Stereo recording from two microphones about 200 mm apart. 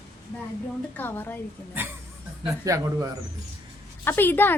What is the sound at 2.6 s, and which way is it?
Speech, 15° right (ahead or behind).